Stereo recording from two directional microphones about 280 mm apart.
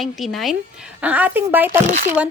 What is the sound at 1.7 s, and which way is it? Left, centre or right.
Speech, right.